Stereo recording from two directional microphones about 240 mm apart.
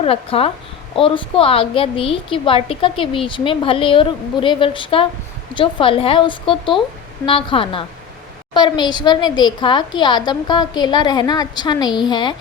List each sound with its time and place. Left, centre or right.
0.0 s a woman's voice: left